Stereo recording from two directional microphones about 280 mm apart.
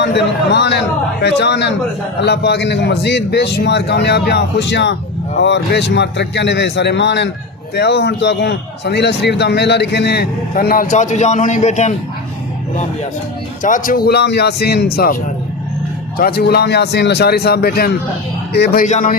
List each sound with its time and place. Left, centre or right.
0.0 s a man's voice: left
13.6 s a man's voice: left